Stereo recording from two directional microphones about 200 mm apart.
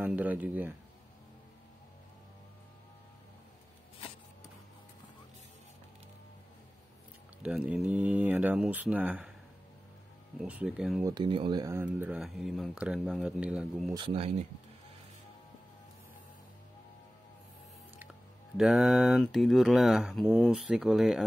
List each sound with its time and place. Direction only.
0.0 s speech: 5° right (ahead or behind)
7.4 s speech: 5° right (ahead or behind)
10.4 s speech: 5° right (ahead or behind)
11.1 s speech: 25° right (ahead or behind); by 13.9 s centre (ahead or behind)
13.9 s speech: 25° right (ahead or behind)
18.6 s speech: centre (ahead or behind)